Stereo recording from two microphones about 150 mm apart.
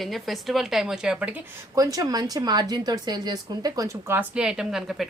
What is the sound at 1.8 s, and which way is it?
A woman's voice, 25° right (ahead or behind).